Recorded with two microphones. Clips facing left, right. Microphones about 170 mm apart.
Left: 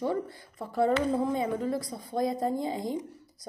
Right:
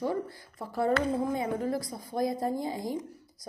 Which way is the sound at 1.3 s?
25° left (ahead or behind).